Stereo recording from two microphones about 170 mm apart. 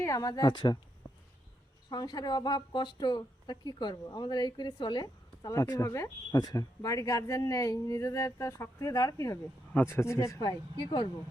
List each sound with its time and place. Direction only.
0.0 s a woman's voice: 20° left (ahead or behind)
1.9 s a woman's voice: 25° left (ahead or behind)